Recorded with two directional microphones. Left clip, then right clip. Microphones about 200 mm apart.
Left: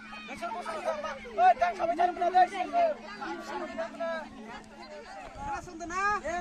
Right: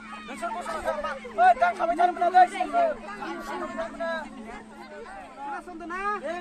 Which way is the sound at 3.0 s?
45° left (ahead or behind).